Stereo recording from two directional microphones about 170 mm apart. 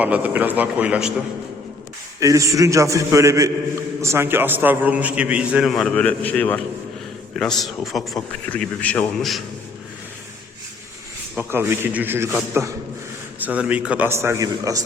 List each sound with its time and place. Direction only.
0.0 s a man's voice: 10° right (ahead or behind)
2.2 s a man's voice: 20° right (ahead or behind); by 9.4 s 5° left (ahead or behind)
11.3 s a man's voice: 10° right (ahead or behind)